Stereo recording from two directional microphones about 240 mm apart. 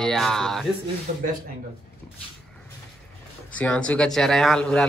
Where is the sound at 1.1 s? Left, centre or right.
Right.